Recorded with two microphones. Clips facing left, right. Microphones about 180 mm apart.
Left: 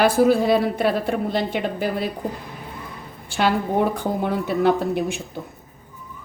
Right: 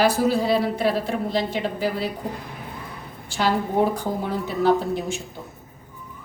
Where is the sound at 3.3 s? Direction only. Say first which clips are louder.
Left 2 dB; 60° left (ahead or behind).